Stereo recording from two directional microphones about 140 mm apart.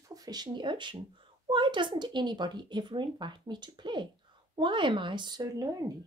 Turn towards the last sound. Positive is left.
turn(degrees=-25)  # may be behind; listen again after turning